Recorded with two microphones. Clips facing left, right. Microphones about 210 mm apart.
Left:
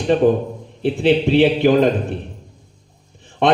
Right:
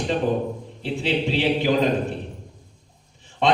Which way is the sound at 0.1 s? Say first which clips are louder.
Left 9 dB; 55° left (ahead or behind).